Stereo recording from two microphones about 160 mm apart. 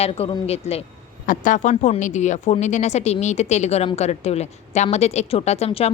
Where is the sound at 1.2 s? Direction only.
55° left (ahead or behind).